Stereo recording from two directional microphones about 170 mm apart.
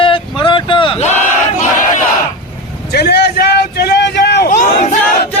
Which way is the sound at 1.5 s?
50° left (ahead or behind).